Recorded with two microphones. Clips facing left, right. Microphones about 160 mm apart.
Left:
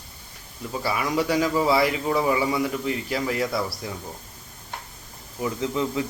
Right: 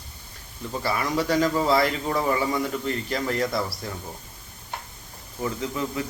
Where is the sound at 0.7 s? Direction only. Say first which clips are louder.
Even; 10° left (ahead or behind).